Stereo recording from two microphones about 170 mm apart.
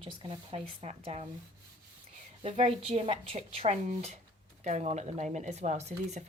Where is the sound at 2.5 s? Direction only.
40° right (ahead or behind).